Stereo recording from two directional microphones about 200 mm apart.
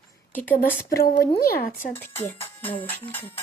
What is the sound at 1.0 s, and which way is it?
Speech, 45° left (ahead or behind).